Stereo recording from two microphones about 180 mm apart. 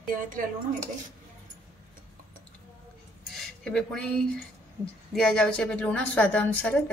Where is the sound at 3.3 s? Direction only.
5° left (ahead or behind).